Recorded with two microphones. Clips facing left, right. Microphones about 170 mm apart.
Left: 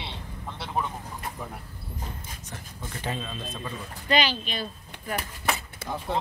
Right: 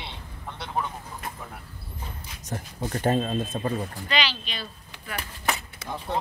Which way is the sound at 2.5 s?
50° right (ahead or behind).